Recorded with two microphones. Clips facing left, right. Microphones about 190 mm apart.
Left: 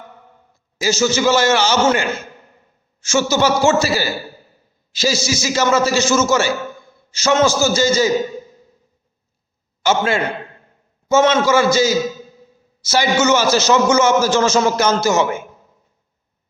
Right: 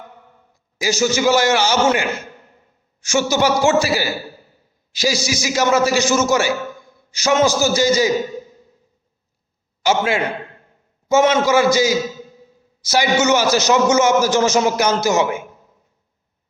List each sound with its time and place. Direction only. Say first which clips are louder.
0.8 s a man's voice: left 1 dB; 15° right (ahead or behind)
9.8 s a man's voice: left 1 dB; 15° right (ahead or behind)